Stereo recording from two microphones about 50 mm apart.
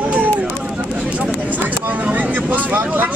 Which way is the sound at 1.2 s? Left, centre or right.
Right.